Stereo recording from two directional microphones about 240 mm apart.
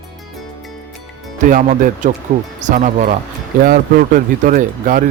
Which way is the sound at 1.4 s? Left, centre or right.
Right.